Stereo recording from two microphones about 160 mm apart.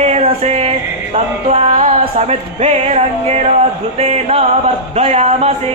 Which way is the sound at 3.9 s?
40° right (ahead or behind).